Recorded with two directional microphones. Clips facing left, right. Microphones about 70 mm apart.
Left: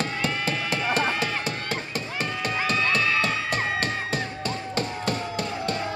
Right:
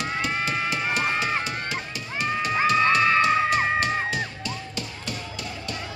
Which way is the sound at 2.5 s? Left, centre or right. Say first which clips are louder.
Right 5 dB; right.